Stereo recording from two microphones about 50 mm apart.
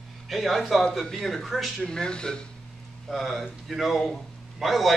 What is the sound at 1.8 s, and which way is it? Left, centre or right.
Speech, centre.